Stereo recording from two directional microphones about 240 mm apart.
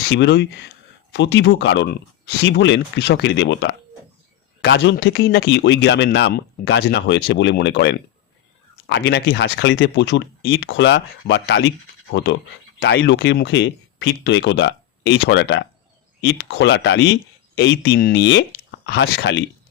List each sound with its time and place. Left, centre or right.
0.0 s speech: left